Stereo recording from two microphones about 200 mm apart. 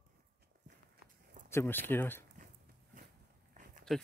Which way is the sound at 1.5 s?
10° left (ahead or behind).